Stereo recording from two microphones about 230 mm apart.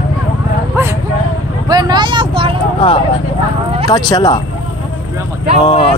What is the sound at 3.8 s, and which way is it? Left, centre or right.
Speech, centre.